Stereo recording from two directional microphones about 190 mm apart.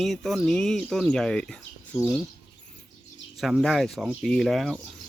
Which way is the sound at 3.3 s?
Centre (ahead or behind).